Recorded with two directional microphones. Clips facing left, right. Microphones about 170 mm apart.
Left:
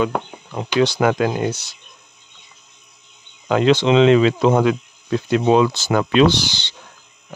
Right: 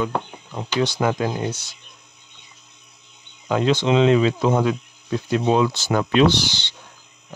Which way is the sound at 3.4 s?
75° left (ahead or behind).